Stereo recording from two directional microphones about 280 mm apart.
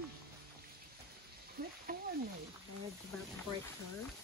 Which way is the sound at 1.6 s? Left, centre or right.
Right.